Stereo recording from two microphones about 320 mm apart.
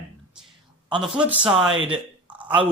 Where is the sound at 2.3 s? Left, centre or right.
Centre.